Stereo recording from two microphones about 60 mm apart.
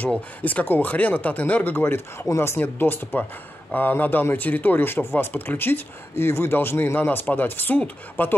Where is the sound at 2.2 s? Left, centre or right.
Left.